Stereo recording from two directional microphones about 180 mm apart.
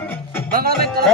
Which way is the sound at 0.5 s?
60° right (ahead or behind).